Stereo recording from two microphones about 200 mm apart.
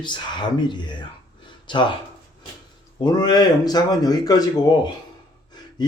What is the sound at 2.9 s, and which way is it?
Speech, 20° left (ahead or behind).